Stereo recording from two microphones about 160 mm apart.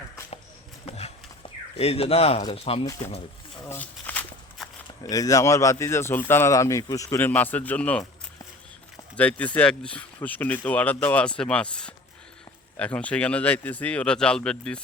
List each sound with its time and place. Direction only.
0.9 s horse: 40° left (ahead or behind)
1.8 s speech: 40° left (ahead or behind)
3.7 s a sound: 10° left (ahead or behind)
4.6 s walk: centre (ahead or behind)
5.0 s speech: 20° left (ahead or behind)
9.1 s speech: 10° left (ahead or behind)